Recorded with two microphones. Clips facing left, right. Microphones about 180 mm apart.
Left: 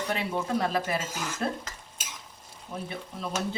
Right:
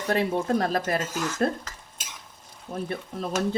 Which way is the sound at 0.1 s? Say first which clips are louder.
Right 7 dB; 45° right (ahead or behind).